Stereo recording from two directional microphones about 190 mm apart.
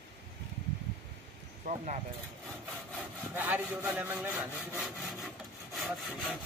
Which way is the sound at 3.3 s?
10° right (ahead or behind).